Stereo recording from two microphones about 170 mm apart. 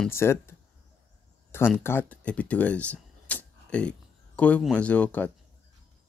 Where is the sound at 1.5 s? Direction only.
10° left (ahead or behind).